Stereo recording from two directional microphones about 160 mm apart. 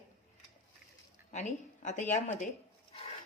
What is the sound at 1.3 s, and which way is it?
Speech, 50° left (ahead or behind).